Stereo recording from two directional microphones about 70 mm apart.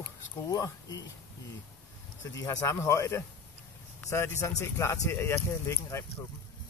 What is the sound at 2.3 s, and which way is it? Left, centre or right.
Speech, left.